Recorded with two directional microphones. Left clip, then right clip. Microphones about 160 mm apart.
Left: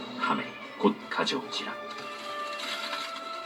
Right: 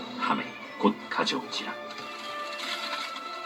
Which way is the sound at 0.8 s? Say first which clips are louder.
Right 1 dB; centre (ahead or behind).